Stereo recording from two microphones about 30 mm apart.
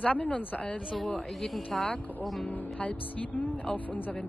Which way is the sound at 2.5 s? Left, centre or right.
Left.